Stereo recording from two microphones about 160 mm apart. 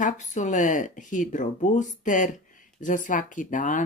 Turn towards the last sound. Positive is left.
turn(degrees=55)  # may be behind; listen again after turning